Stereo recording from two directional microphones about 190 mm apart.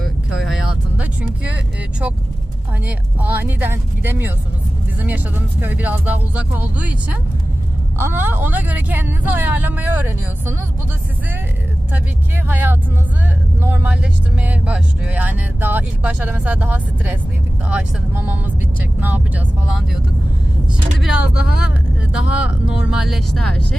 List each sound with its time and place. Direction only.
0.0 s vehicle: centre (ahead or behind)
1.5 s speech: 5° right (ahead or behind)
12.5 s speech: 10° right (ahead or behind)
21.0 s speech: 5° right (ahead or behind)
22.1 s speech: 80° left
22.9 s speech: centre (ahead or behind)